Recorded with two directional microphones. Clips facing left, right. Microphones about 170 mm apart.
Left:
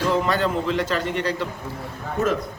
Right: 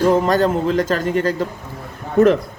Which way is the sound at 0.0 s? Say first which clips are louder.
Right 6 dB; 45° right (ahead or behind).